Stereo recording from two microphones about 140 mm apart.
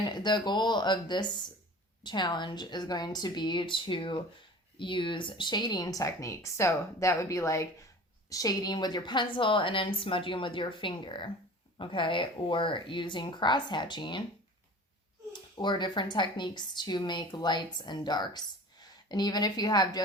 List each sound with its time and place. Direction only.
0.0 s a woman's voice: 30° left (ahead or behind)
15.3 s a woman's voice: 35° left (ahead or behind)